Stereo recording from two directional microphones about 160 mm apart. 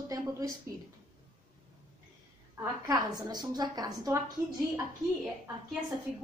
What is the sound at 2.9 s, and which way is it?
A woman's voice, 25° right (ahead or behind).